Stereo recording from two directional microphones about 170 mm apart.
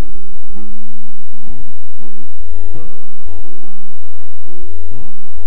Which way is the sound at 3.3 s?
35° left (ahead or behind).